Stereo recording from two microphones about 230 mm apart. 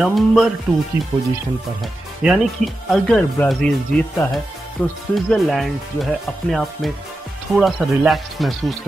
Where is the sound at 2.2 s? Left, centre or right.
Centre.